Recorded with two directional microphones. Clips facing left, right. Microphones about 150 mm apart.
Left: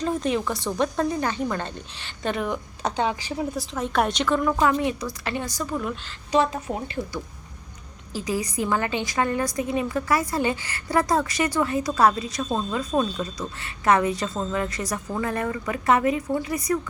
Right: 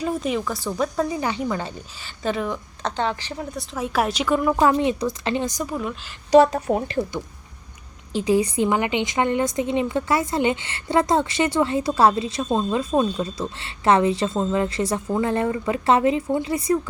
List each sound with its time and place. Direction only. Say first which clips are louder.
0.0 s speech: even; 5° right (ahead or behind)
4.6 s a woman's voice: right 4 dB; 25° right (ahead or behind)
6.5 s speech: right 7 dB; 45° right (ahead or behind)
8.1 s a woman's voice: right 7 dB; 25° right (ahead or behind)